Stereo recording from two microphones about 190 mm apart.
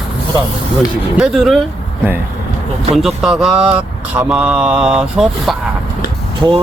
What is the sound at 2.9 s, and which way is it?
Speech, centre (ahead or behind).